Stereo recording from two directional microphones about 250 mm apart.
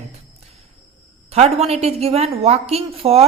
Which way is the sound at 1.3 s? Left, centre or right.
Right.